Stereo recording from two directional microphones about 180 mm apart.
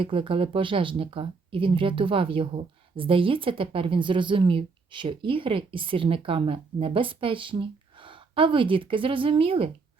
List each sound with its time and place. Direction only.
0.0 s speech: 30° right (ahead or behind)